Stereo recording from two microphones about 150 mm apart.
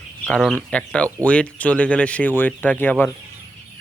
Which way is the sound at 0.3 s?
5° left (ahead or behind).